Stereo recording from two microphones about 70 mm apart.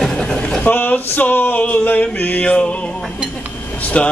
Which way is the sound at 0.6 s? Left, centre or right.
Left.